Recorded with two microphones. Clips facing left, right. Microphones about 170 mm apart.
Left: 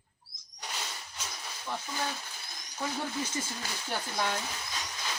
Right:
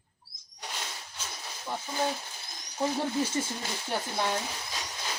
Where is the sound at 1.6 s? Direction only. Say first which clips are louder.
Right 4 dB; 20° right (ahead or behind).